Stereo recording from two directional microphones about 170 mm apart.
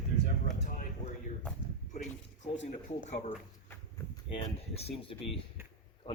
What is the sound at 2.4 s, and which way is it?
Speech, 45° left (ahead or behind).